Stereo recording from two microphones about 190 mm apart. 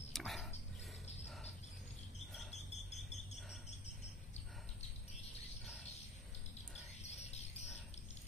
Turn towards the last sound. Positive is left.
turn(degrees=35)  # may be behind; listen again after turning